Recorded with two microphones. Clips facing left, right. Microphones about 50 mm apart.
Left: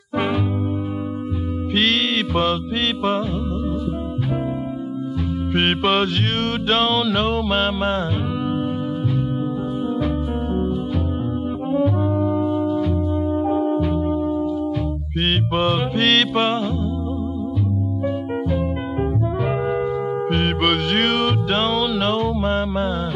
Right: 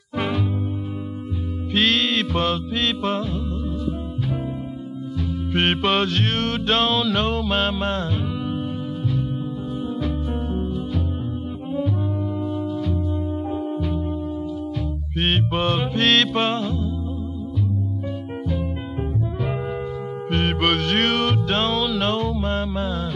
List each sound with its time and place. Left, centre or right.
1.7 s music: centre
5.5 s music: centre
10.0 s music: centre
11.7 s brass instrument: centre
12.4 s music: centre
13.4 s music: centre
13.7 s music: centre
15.1 s music: centre
20.2 s music: centre